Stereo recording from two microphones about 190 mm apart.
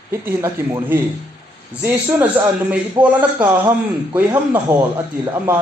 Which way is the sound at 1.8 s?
10° right (ahead or behind).